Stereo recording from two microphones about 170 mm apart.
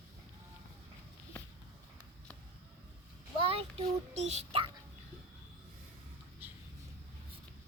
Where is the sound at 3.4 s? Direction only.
35° right (ahead or behind).